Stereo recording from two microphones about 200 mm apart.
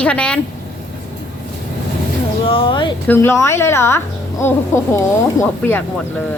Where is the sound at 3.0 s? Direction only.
10° left (ahead or behind).